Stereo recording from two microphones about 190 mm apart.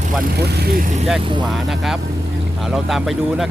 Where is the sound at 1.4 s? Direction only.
Centre (ahead or behind).